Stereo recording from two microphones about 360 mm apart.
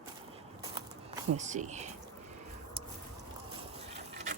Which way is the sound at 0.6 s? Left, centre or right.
Centre.